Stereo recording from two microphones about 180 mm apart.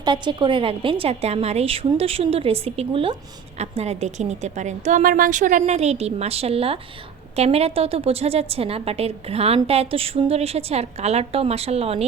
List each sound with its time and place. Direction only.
0.0 s a woman's voice: 25° right (ahead or behind)